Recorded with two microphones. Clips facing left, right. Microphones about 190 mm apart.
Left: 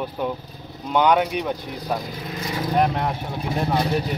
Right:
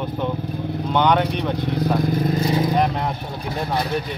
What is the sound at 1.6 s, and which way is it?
Speech, 60° right (ahead or behind).